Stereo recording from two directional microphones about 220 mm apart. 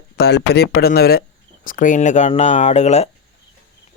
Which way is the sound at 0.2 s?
50° left (ahead or behind).